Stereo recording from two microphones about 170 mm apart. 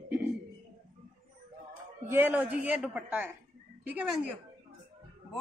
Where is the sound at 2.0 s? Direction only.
10° right (ahead or behind).